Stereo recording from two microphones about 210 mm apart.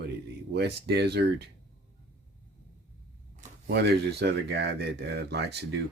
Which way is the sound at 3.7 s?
50° right (ahead or behind).